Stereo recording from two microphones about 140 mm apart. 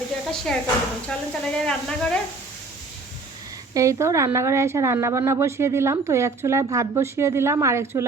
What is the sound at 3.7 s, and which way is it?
A woman's voice, 20° right (ahead or behind).